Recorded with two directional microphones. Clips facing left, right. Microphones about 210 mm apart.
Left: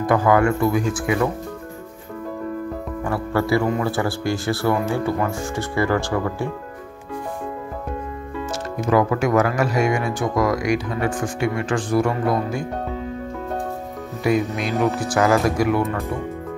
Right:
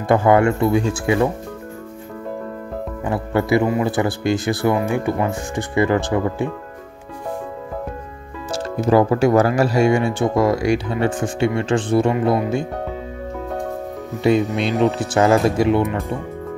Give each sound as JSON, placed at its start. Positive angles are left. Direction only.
{"t": 0.0, "sound": "speech", "side_deg": -25}
{"t": 3.0, "sound": "speech", "side_deg": -20}
{"t": 8.5, "sound": "speech", "side_deg": -30}
{"t": 14.2, "sound": "speech", "side_deg": -25}